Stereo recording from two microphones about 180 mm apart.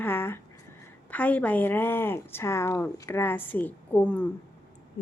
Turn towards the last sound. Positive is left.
turn(degrees=40)  # may be behind; listen again after turning